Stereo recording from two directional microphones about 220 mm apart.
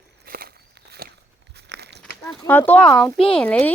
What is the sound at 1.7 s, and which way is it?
Crumpling, 50° right (ahead or behind).